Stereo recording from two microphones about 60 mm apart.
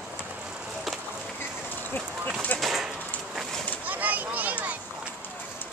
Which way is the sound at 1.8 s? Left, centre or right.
Left.